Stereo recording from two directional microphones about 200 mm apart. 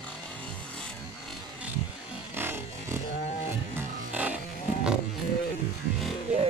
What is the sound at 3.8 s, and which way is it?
Music, 10° right (ahead or behind).